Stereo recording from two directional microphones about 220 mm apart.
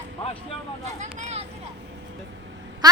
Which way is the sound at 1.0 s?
30° right (ahead or behind).